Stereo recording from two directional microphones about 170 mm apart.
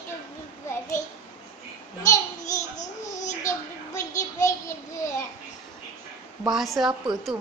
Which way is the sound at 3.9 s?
20° left (ahead or behind).